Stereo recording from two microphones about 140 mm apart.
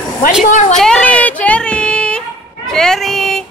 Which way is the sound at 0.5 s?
60° left (ahead or behind).